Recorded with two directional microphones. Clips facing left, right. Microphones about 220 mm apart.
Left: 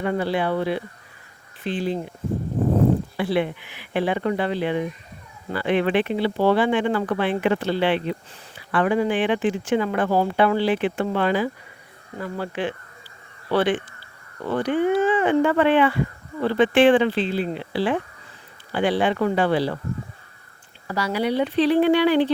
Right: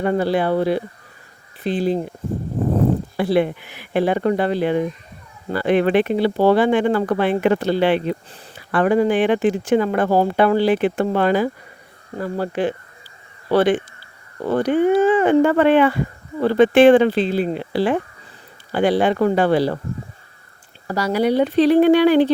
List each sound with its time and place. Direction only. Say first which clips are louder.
0.0 s speech: right 4 dB; 40° right (ahead or behind)
3.2 s speech: right 5 dB; 40° right (ahead or behind)
20.8 s speech: right 5 dB; 40° right (ahead or behind)